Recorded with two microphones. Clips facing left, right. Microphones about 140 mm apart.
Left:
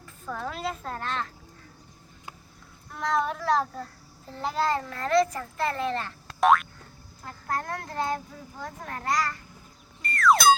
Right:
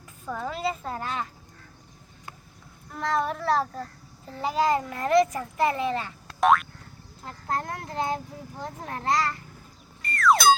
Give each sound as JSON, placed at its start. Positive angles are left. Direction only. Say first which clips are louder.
{"t": 0.3, "sound": "a woman's voice", "louder": "right 3 dB", "side_deg": -5}
{"t": 2.9, "sound": "a woman's voice", "louder": "even", "side_deg": 0}
{"t": 7.3, "sound": "a child's voice", "louder": "right 1 dB", "side_deg": -20}
{"t": 10.0, "sound": "music", "louder": "even", "side_deg": 0}